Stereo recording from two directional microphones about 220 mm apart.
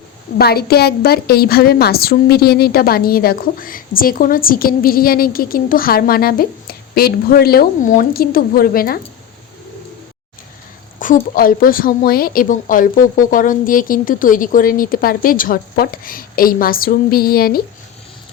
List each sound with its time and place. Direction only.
0.3 s a woman's voice: 45° left (ahead or behind)
11.0 s a woman's voice: 40° left (ahead or behind)